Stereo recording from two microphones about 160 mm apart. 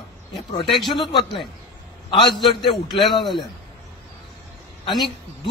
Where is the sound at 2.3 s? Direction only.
Centre (ahead or behind).